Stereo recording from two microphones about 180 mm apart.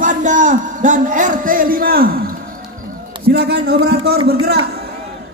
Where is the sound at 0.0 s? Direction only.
45° right (ahead or behind).